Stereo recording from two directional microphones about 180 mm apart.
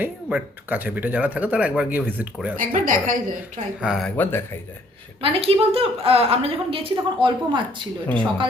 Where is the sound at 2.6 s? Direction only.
50° right (ahead or behind).